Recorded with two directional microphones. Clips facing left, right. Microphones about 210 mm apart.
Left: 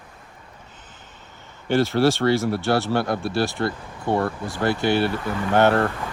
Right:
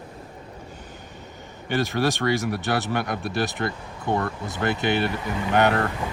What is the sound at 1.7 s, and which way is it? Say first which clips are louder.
Speech: left 5 dB; 15° right (ahead or behind).